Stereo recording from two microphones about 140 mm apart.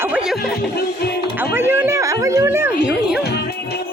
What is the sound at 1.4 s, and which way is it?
Speech, 15° right (ahead or behind).